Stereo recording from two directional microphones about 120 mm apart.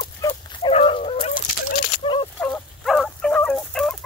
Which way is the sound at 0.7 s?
55° left (ahead or behind).